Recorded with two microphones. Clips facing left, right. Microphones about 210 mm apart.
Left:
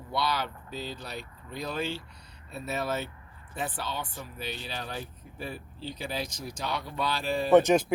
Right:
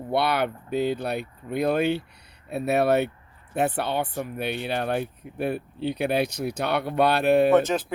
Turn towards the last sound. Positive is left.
turn(degrees=15)  # may be behind; listen again after turning